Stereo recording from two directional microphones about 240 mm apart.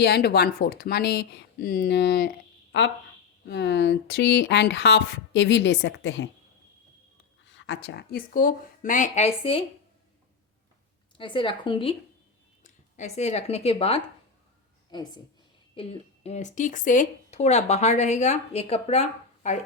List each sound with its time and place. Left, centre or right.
0.0 s speech: left
3.4 s speech: left
7.4 s speech: left
11.2 s a woman's voice: left
15.7 s a woman's voice: left